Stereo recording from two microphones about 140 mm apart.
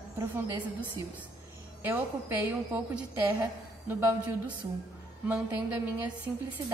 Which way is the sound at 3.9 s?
15° right (ahead or behind).